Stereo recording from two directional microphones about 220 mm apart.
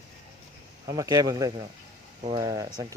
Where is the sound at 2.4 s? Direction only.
15° right (ahead or behind).